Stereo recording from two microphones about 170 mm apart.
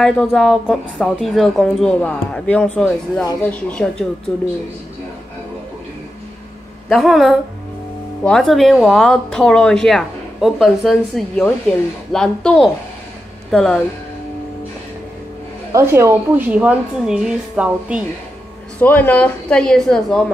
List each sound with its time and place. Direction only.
0.0 s a woman's voice: 5° left (ahead or behind)
6.9 s speech: centre (ahead or behind)
15.7 s a woman's voice: 15° right (ahead or behind)
18.8 s a woman's voice: 10° left (ahead or behind)